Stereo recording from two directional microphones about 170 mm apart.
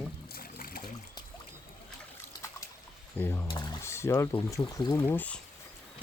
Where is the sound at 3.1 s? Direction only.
15° left (ahead or behind).